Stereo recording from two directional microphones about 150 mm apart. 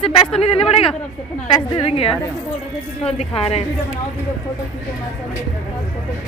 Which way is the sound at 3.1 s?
40° left (ahead or behind).